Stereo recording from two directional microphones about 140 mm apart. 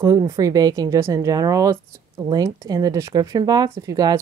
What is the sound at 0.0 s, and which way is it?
A woman's voice, 25° right (ahead or behind).